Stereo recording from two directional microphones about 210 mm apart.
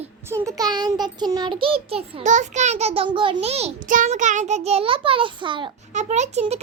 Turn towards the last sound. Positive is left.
turn(degrees=-30)  # may be behind; listen again after turning